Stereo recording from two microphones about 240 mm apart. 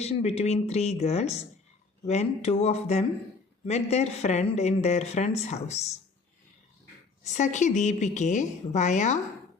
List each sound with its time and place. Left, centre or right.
0.0 s speech: left
7.3 s speech: left